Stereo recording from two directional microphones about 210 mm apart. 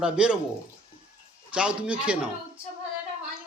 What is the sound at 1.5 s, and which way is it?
Speech, 5° right (ahead or behind).